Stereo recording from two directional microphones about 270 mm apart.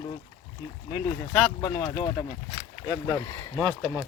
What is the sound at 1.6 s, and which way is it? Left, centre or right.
Speech, centre.